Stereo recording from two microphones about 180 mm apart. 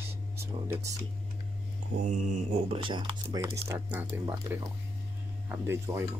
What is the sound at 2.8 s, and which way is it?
Speech, 30° right (ahead or behind).